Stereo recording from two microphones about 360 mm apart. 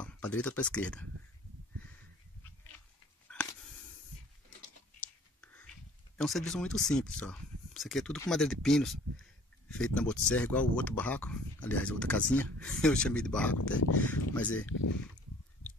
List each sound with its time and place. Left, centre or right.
0.0 s speech: centre
3.3 s a sound: centre
5.0 s whispering: centre
6.1 s speech: centre
14.7 s speech: left